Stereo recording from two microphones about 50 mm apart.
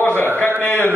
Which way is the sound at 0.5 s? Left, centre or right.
Left.